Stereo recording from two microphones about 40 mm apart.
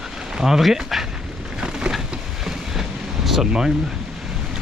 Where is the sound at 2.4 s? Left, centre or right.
Centre.